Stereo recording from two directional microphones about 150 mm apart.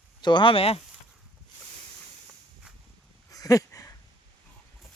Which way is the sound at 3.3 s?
25° left (ahead or behind).